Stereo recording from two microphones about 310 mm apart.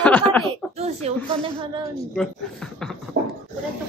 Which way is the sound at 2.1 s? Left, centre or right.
Centre.